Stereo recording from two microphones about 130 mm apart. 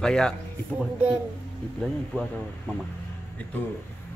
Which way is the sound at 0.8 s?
10° right (ahead or behind).